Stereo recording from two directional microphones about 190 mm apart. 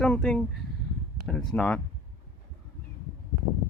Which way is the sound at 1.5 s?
5° left (ahead or behind).